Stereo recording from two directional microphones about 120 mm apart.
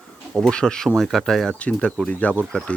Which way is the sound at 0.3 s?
5° left (ahead or behind).